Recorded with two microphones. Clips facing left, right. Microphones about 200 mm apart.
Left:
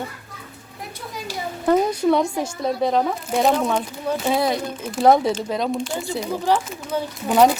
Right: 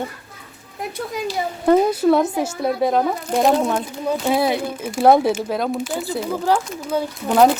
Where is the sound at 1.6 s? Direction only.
5° right (ahead or behind).